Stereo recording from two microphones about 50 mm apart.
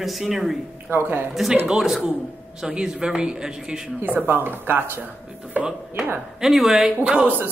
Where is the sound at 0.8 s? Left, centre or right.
Right.